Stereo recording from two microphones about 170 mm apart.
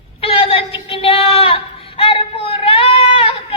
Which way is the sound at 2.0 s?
30° left (ahead or behind).